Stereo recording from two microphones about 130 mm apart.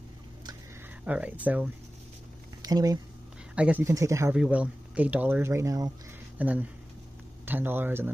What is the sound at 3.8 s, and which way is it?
Speech, 25° right (ahead or behind).